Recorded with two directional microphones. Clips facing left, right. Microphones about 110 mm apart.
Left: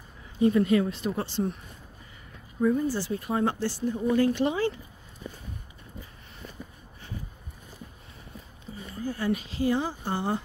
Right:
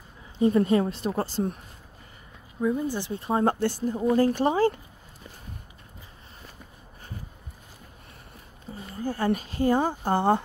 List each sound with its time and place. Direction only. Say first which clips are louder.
0.4 s speech: right 1 dB; 35° right (ahead or behind)
2.6 s speech: left 1 dB; 15° right (ahead or behind)
3.4 s speech: right 3 dB; 50° right (ahead or behind)
8.7 s a sound: right 2 dB; 40° right (ahead or behind)
9.0 s speech: right 3 dB; 45° right (ahead or behind)